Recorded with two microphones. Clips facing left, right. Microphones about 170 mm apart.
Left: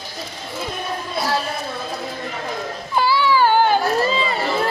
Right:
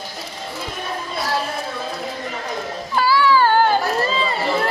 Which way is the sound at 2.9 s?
20° left (ahead or behind).